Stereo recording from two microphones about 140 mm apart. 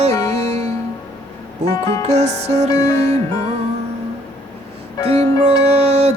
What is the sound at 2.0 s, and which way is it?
Music, 55° right (ahead or behind).